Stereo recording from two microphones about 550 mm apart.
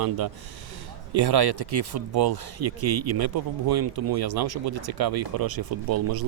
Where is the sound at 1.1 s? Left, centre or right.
Right.